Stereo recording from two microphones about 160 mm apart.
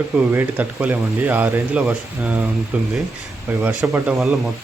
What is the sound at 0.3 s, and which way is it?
Speech, 10° right (ahead or behind).